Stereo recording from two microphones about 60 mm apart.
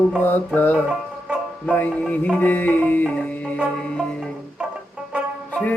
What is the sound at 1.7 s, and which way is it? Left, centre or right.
Music, left.